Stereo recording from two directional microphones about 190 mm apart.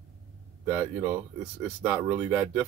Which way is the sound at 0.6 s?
10° right (ahead or behind).